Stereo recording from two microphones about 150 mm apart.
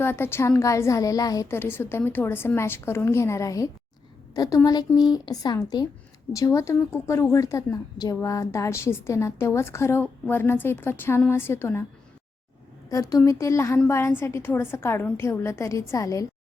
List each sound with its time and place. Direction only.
0.0 s a woman's voice: 15° left (ahead or behind)
12.9 s a woman's voice: 20° left (ahead or behind)